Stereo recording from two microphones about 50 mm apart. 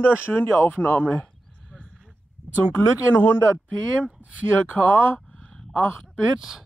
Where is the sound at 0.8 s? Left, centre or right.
Left.